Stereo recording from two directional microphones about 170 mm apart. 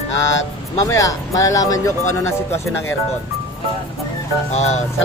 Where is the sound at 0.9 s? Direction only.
20° left (ahead or behind).